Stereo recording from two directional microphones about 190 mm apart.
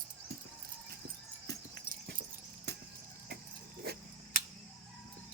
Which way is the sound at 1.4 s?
60° right (ahead or behind).